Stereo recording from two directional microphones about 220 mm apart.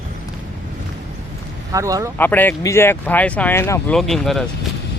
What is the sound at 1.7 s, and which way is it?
Speech, 15° right (ahead or behind).